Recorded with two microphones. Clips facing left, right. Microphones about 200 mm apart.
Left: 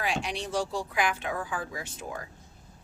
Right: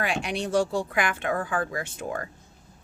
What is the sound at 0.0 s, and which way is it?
Speech, 60° right (ahead or behind).